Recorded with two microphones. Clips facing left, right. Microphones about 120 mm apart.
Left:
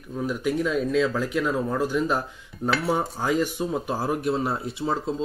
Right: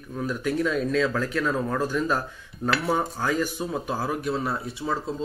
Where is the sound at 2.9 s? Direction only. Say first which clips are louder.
Left 1 dB; 10° left (ahead or behind).